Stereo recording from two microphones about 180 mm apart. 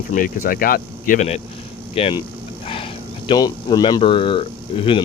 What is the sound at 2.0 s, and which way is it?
Speech, 35° left (ahead or behind).